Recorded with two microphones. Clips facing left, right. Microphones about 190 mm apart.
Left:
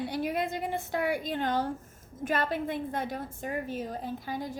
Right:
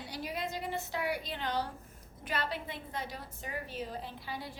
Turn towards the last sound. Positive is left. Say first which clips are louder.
# left 7 dB
turn(degrees=45)  # may be behind; listen again after turning